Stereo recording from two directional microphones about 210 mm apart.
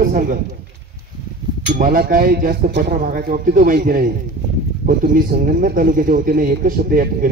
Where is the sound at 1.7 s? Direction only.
40° right (ahead or behind).